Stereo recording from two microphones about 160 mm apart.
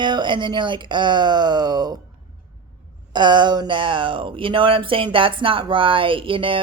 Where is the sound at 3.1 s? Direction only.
30° right (ahead or behind).